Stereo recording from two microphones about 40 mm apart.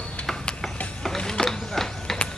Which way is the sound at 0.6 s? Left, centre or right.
Centre.